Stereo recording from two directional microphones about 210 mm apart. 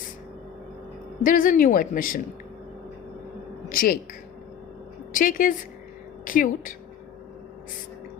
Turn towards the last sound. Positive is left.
turn(degrees=40)  # may be behind; listen again after turning